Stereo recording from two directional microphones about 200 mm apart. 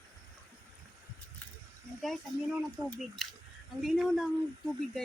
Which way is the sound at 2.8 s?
20° right (ahead or behind).